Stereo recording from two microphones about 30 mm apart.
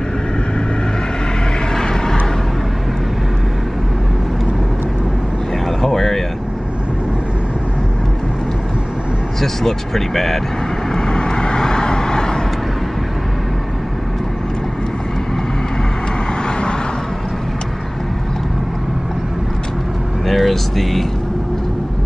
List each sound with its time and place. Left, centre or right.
5.7 s a sound: centre
9.4 s speech: centre
10.9 s vehicle: left
20.2 s vehicle: centre